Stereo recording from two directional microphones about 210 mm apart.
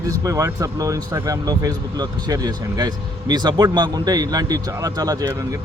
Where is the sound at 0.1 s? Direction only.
15° right (ahead or behind).